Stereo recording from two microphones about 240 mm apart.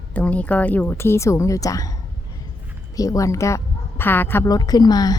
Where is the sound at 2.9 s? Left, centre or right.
Centre.